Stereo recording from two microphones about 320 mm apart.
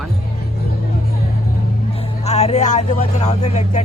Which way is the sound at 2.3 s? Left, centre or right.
Left.